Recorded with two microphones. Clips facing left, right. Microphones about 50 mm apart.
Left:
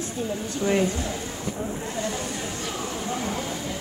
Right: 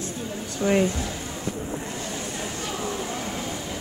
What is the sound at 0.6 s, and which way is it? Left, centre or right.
Speech, centre.